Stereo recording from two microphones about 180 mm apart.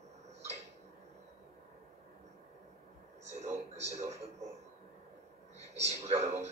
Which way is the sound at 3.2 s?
35° right (ahead or behind).